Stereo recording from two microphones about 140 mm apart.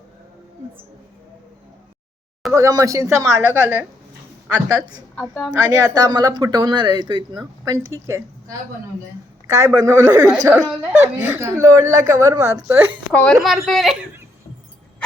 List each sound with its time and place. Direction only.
2.5 s speech: 20° right (ahead or behind)
4.7 s speech: 30° right (ahead or behind)
5.2 s a child's voice: 5° right (ahead or behind)
5.5 s speech: 25° right (ahead or behind)
9.5 s speech: 25° right (ahead or behind)
12.6 s speech: 15° right (ahead or behind)
13.1 s a child's voice: 5° left (ahead or behind)